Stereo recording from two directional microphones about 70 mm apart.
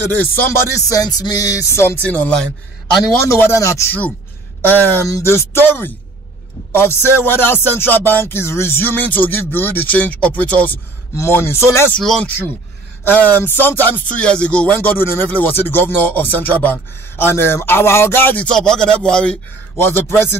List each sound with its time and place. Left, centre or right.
0.1 s music: left
0.8 s a sound: left
2.0 s speech: centre
3.3 s music: left
3.5 s speech: left
4.6 s speech: left
5.2 s music: left
11.1 s music: left
12.0 s speech: centre
13.0 s speech: left
14.2 s speech: centre; by 17.6 s left
17.6 s music: left
18.4 s speech: centre
19.8 s music: left